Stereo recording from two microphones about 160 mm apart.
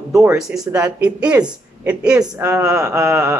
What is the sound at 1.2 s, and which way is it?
Speech, 5° right (ahead or behind).